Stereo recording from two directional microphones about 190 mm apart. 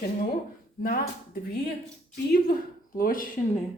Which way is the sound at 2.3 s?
50° left (ahead or behind).